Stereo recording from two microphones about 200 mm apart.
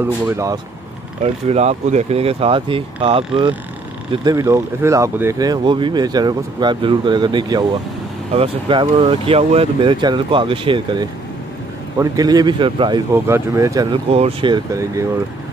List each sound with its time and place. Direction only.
0.0 s speech: 15° right (ahead or behind)
1.2 s speech: 35° right (ahead or behind)
13.1 s speech: 15° right (ahead or behind)
14.1 s speech: 30° right (ahead or behind)